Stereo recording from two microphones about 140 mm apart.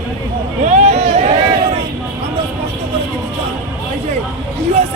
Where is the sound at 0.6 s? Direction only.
55° right (ahead or behind).